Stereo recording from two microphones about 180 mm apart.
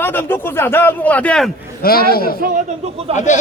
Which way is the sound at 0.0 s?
10° left (ahead or behind).